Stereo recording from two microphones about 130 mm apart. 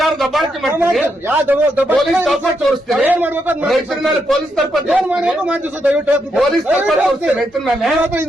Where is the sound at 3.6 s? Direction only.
Centre (ahead or behind).